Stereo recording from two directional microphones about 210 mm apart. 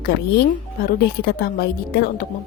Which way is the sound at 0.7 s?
45° left (ahead or behind).